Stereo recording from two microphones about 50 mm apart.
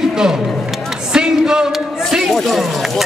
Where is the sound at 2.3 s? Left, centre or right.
Centre.